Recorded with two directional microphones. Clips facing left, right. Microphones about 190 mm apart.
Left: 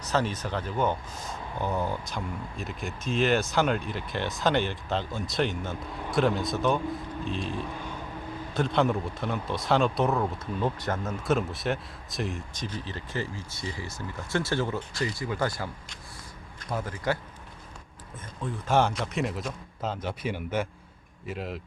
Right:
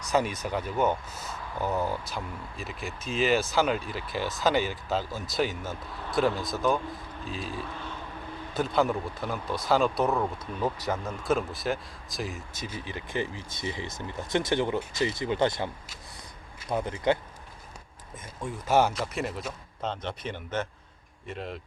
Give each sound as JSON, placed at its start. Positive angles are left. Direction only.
{"t": 0.1, "sound": "speech", "side_deg": -10}
{"t": 7.7, "sound": "vehicle", "side_deg": 10}
{"t": 8.5, "sound": "speech", "side_deg": 0}
{"t": 18.4, "sound": "speech", "side_deg": -10}